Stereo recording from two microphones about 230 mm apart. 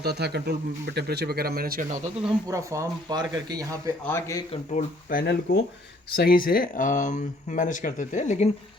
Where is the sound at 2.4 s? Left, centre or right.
Centre.